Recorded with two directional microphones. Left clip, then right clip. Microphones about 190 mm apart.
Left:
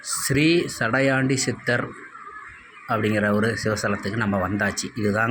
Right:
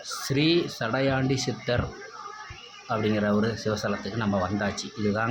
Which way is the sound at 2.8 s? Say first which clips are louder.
Left 4 dB; 10° left (ahead or behind).